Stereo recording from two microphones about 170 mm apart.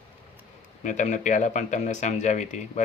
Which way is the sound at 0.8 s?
45° left (ahead or behind).